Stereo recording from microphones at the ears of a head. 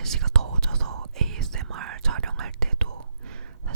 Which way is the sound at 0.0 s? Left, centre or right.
Right.